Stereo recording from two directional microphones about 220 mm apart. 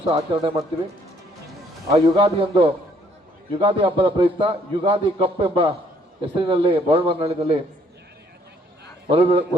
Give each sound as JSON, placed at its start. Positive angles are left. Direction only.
{"t": 0.1, "sound": "a man's voice", "side_deg": -20}
{"t": 1.9, "sound": "a man's voice", "side_deg": -25}
{"t": 9.0, "sound": "a man's voice", "side_deg": -25}